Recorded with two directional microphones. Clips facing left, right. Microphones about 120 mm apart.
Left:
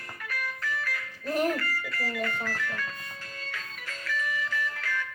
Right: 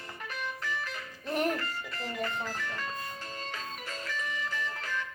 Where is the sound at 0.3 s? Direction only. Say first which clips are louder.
Left 2 dB; 20° right (ahead or behind).